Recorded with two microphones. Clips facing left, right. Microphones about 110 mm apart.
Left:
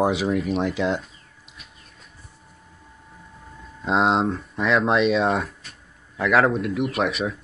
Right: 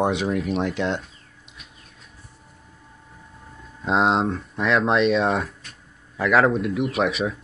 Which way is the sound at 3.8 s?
Centre (ahead or behind).